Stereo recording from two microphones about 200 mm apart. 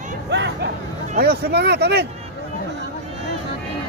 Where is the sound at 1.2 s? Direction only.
55° right (ahead or behind).